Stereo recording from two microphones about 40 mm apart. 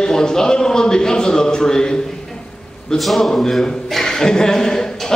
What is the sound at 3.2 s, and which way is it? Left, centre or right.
A man's voice, centre.